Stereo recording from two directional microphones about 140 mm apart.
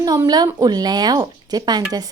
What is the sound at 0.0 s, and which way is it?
A woman's voice, 25° right (ahead or behind).